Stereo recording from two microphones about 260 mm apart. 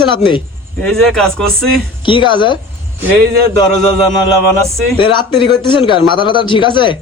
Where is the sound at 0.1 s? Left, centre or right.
Centre.